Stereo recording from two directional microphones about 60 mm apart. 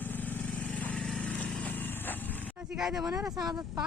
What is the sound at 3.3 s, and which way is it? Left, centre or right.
Speech, right.